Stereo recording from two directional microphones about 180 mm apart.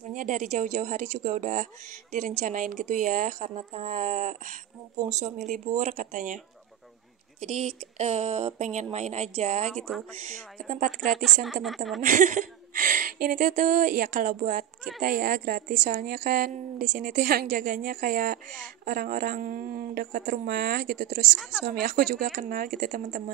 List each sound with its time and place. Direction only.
0.1 s speech: 45° right (ahead or behind)
9.7 s speech: centre (ahead or behind)
10.2 s speech: 45° right (ahead or behind)
11.4 s speech: centre (ahead or behind)
12.0 s speech: 45° right (ahead or behind)
21.4 s speech: 5° right (ahead or behind)
21.6 s speech: 50° right (ahead or behind)